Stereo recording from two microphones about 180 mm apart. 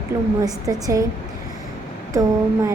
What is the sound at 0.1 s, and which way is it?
Speech, 15° right (ahead or behind).